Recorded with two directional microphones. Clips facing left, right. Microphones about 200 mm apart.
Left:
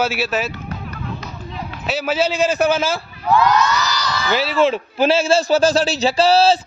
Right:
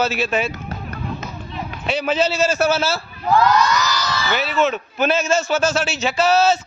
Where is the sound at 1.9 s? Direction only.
5° left (ahead or behind).